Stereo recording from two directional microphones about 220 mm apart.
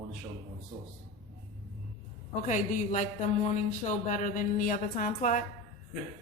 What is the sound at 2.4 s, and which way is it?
A woman's voice, 35° left (ahead or behind).